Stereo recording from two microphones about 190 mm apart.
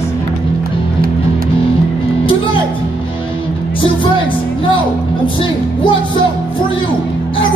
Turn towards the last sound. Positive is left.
turn(degrees=25)  # may be behind; listen again after turning